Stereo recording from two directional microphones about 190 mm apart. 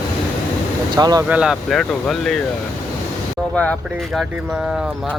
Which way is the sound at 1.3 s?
5° right (ahead or behind).